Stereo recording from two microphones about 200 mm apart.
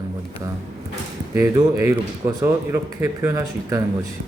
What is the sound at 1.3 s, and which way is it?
A man's voice, 15° right (ahead or behind).